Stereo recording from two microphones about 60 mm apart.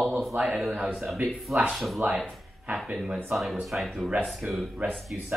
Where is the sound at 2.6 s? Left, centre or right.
Centre.